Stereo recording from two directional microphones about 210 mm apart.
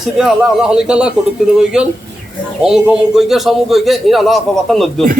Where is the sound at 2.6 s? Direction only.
5° right (ahead or behind).